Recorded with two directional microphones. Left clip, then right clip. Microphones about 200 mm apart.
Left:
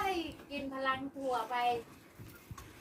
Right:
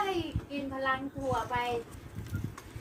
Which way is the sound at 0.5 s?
40° left (ahead or behind).